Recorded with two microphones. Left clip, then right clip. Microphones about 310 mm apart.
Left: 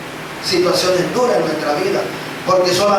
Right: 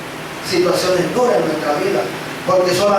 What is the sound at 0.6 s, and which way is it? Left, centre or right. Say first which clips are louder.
A man's voice: even; centre.